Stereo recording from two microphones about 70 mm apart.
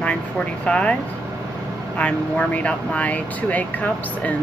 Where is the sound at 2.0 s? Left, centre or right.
Centre.